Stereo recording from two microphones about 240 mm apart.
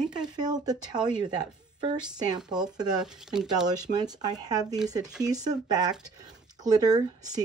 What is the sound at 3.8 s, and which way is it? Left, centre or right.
Speech, centre.